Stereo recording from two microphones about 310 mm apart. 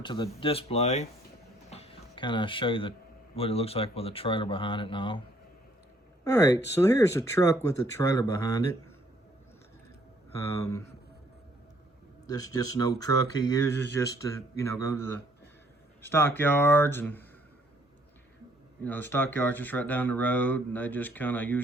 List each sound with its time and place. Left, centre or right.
0.0 s speech: centre
1.7 s a sound: centre
3.3 s speech: centre
6.2 s speech: centre
10.3 s speech: centre
12.3 s speech: centre
18.8 s speech: centre